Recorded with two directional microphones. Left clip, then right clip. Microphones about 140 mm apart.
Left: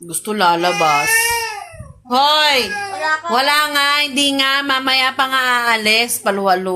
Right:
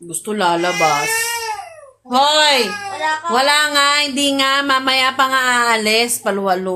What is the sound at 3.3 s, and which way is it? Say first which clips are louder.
Music: right 2 dB; centre (ahead or behind).